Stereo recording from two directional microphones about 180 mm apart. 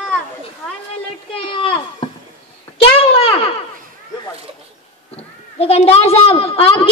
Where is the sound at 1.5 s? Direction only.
30° left (ahead or behind).